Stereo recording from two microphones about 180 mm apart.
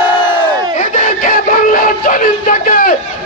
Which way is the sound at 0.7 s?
45° left (ahead or behind).